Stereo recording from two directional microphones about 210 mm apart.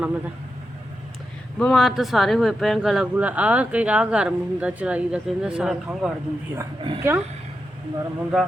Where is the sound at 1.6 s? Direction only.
Centre (ahead or behind).